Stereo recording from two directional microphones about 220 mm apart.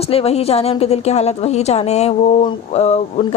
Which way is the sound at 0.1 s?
25° left (ahead or behind).